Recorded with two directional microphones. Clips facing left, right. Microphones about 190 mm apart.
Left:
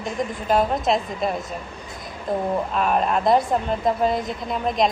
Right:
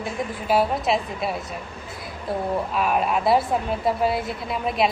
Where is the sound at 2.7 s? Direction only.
5° right (ahead or behind).